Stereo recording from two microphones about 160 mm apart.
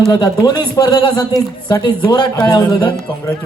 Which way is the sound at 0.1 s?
25° left (ahead or behind).